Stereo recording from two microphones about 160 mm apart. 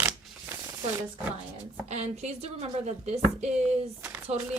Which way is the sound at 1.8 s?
45° right (ahead or behind).